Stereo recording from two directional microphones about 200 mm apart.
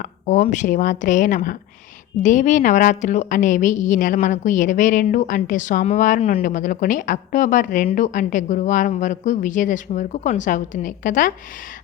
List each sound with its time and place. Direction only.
0.0 s a woman's voice: 35° left (ahead or behind)